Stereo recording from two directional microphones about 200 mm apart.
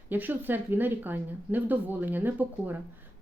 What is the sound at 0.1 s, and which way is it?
A woman's voice, 10° right (ahead or behind).